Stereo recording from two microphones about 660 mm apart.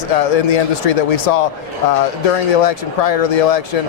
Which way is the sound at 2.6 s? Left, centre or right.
Left.